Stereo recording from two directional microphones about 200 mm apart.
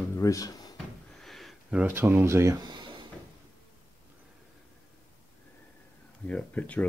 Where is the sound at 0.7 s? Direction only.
Centre (ahead or behind); by 2.9 s 20° right (ahead or behind).